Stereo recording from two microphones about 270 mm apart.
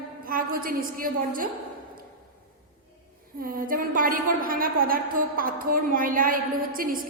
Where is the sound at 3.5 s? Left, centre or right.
Right.